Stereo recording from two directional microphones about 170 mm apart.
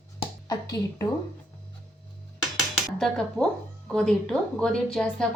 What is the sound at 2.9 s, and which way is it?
A woman's voice, 5° left (ahead or behind).